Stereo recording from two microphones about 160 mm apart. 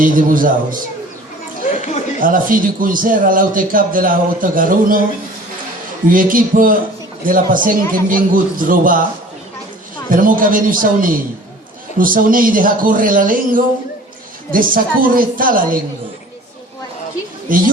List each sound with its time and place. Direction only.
0.0 s a man's voice: 60° right (ahead or behind)
1.7 s a sound: 45° left (ahead or behind)
2.2 s a man's voice: 60° right (ahead or behind)
6.1 s a man's voice: 60° right (ahead or behind)
10.1 s a man's voice: 60° right (ahead or behind)
17.5 s a man's voice: 60° right (ahead or behind)